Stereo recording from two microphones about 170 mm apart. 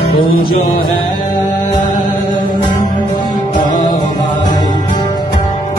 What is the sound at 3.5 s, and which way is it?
Music, 25° left (ahead or behind).